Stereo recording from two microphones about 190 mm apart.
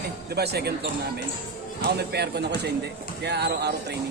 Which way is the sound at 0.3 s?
55° right (ahead or behind).